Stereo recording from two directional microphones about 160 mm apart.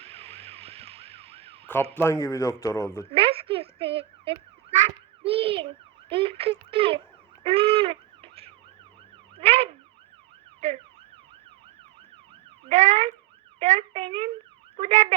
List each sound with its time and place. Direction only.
0.0 s emergency vehicle: 40° right (ahead or behind)
1.6 s speech: 15° left (ahead or behind)
3.1 s a sound: 35° right (ahead or behind)
5.2 s a child's voice: 35° right (ahead or behind)
7.4 s a sound: 35° right (ahead or behind)
9.3 s emergency vehicle: 35° right (ahead or behind)
12.6 s emergency vehicle: 45° right (ahead or behind)
13.6 s speech: 40° right (ahead or behind)
14.8 s car alarm: 45° right (ahead or behind)